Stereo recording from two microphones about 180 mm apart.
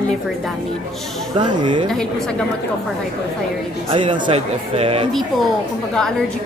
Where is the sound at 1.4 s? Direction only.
25° right (ahead or behind).